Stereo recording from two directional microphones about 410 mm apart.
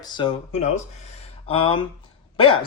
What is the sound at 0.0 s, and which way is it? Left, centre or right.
Speech, centre.